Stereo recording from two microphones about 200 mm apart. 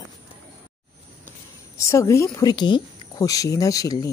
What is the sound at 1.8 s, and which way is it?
Speech, 15° left (ahead or behind).